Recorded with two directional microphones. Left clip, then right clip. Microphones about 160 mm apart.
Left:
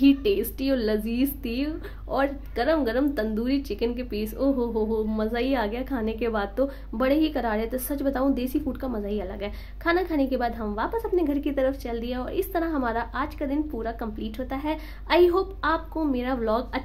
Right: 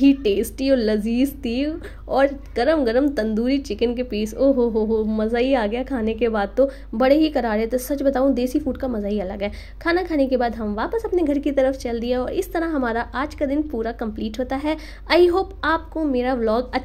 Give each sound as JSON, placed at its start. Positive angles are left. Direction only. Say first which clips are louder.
{"t": 0.0, "sound": "a woman's voice", "louder": "right 4 dB", "side_deg": -20}